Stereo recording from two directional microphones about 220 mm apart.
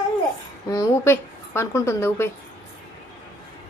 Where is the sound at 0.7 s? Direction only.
15° left (ahead or behind).